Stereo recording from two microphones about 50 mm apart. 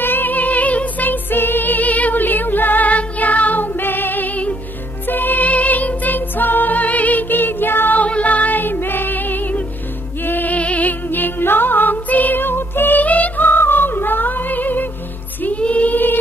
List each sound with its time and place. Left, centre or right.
0.0 s music: left
8.0 s music: left
13.0 s music: left
15.4 s music: left